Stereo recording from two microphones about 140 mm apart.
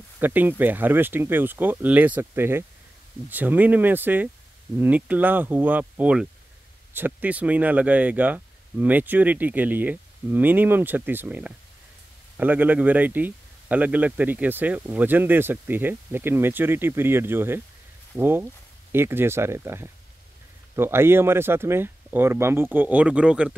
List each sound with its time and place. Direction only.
0.2 s speech: 15° right (ahead or behind)